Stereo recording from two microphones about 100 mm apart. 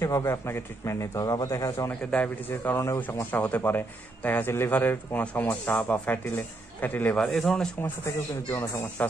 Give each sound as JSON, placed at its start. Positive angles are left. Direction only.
{"t": 0.0, "sound": "a man's voice", "side_deg": 30}
{"t": 1.9, "sound": "a man's voice", "side_deg": 15}
{"t": 7.2, "sound": "speech", "side_deg": 5}
{"t": 8.0, "sound": "a man's voice", "side_deg": 25}